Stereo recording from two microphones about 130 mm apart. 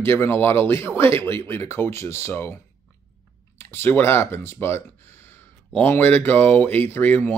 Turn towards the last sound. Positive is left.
turn(degrees=15)  # may be behind; listen again after turning